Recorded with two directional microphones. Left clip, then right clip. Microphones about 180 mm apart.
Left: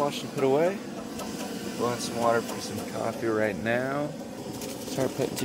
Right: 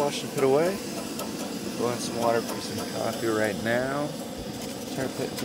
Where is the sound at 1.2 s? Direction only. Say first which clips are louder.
Right 2 dB; centre (ahead or behind).